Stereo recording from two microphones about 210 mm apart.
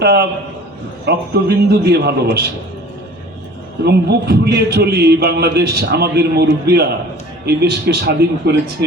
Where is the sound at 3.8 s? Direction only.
50° right (ahead or behind).